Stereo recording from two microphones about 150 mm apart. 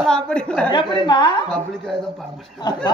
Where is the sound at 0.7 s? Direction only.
30° left (ahead or behind).